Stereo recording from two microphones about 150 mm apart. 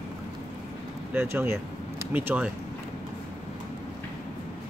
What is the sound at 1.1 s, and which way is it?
Speech, 15° right (ahead or behind).